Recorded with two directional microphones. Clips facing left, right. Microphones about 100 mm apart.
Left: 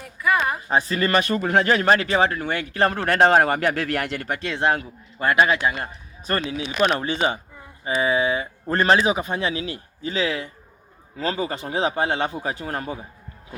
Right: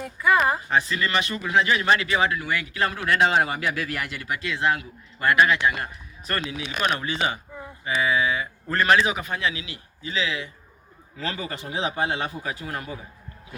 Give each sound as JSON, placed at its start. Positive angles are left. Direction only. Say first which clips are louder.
{"t": 0.0, "sound": "speech", "louder": "right 1 dB", "side_deg": -25}
{"t": 0.7, "sound": "speech", "louder": "left 3 dB", "side_deg": 35}
{"t": 4.4, "sound": "speech", "louder": "left 2 dB", "side_deg": 35}
{"t": 5.2, "sound": "a man's voice", "louder": "left 1 dB", "side_deg": 25}
{"t": 11.2, "sound": "speech", "louder": "left 6 dB", "side_deg": 30}